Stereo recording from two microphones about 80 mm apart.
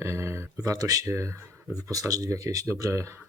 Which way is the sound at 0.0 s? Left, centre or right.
Right.